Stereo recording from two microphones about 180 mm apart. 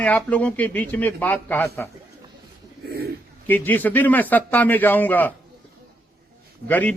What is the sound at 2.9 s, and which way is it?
Bird, 60° right (ahead or behind).